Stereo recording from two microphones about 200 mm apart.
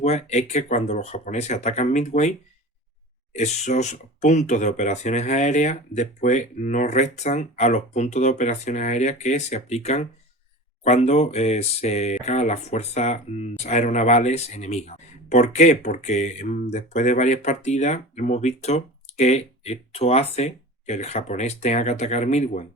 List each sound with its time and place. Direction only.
0.0 s speech: 35° left (ahead or behind)
3.3 s speech: 35° left (ahead or behind)